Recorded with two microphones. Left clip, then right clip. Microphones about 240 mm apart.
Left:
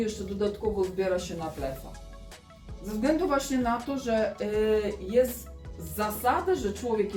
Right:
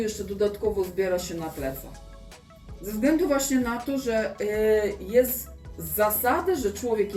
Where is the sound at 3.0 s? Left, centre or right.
Centre.